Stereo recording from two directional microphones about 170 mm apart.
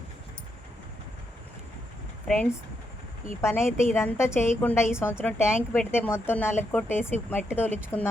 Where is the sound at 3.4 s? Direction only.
15° left (ahead or behind).